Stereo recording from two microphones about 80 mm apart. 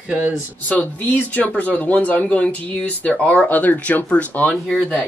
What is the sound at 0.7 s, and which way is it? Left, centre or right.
Speech, centre.